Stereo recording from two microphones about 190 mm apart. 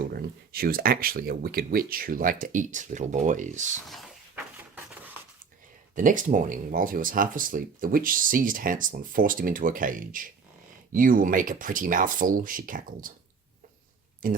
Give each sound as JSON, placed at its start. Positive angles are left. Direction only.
{"t": 0.1, "sound": "speech", "side_deg": -50}
{"t": 4.5, "sound": "a sound", "side_deg": -10}
{"t": 5.9, "sound": "speech", "side_deg": -45}
{"t": 14.2, "sound": "speech", "side_deg": -45}